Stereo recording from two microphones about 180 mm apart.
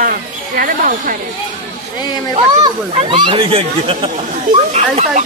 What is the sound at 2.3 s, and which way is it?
Speech, 30° right (ahead or behind).